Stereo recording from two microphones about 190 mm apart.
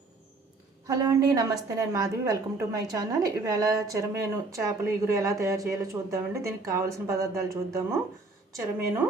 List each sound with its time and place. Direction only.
0.9 s a woman's voice: 20° right (ahead or behind)